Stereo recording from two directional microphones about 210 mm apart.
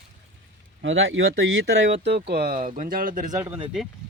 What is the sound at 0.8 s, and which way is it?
Speech, 65° right (ahead or behind).